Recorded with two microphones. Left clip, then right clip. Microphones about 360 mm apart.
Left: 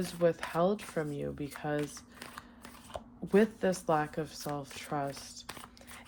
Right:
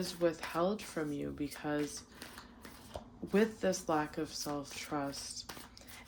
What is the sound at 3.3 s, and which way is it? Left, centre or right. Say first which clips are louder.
Speech: left 4 dB; centre.